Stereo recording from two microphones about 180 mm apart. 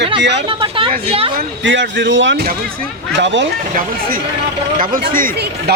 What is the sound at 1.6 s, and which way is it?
Speech, 90° right.